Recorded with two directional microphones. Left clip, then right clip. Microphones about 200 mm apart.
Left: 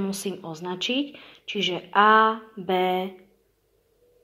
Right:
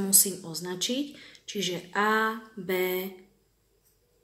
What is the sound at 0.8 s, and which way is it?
Speech, 30° right (ahead or behind).